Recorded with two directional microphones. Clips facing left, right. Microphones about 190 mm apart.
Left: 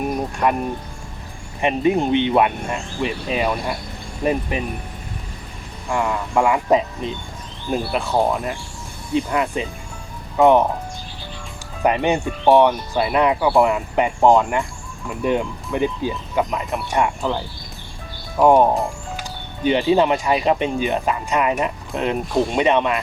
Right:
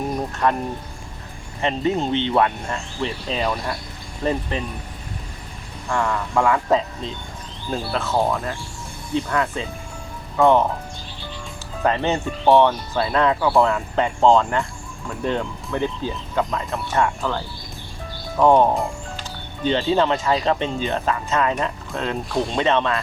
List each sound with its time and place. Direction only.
0.4 s speech: 15° left (ahead or behind)
1.6 s speech: 15° left (ahead or behind)
5.9 s speech: 15° left (ahead or behind)
11.8 s speech: 15° left (ahead or behind)